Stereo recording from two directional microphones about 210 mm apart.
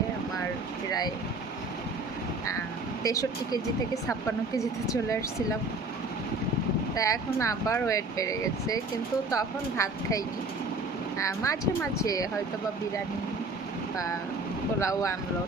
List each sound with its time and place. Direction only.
0.9 s vehicle: 20° left (ahead or behind)
3.0 s speech: 15° left (ahead or behind)
6.9 s speech: 15° left (ahead or behind)
14.8 s speech: 15° left (ahead or behind)